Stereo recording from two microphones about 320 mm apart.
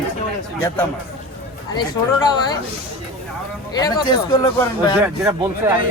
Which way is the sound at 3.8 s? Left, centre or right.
Centre.